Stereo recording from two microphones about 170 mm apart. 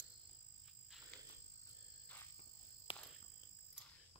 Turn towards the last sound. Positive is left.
turn(degrees=30)  # may be behind; listen again after turning